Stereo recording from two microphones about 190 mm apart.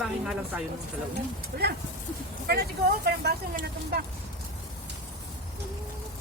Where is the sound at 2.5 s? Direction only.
55° right (ahead or behind).